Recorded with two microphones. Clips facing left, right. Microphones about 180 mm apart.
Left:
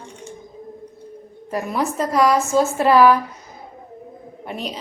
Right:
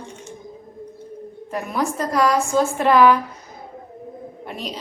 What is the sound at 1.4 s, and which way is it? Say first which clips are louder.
Speech: left 1 dB; 5° left (ahead or behind).